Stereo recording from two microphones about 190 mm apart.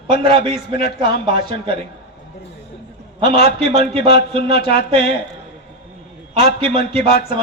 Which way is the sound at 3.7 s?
25° right (ahead or behind).